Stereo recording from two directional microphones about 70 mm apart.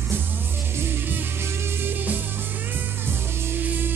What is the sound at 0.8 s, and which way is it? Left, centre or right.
Music, right.